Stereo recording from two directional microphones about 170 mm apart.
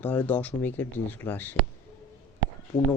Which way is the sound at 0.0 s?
10° left (ahead or behind).